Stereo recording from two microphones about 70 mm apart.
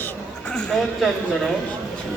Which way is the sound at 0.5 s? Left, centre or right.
Centre.